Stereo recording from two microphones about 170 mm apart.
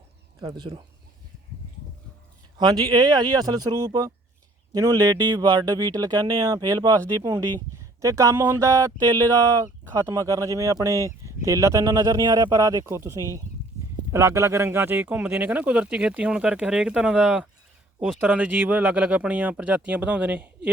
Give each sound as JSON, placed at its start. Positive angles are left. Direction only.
{"t": 0.4, "sound": "speech", "side_deg": -25}
{"t": 2.6, "sound": "speech", "side_deg": -25}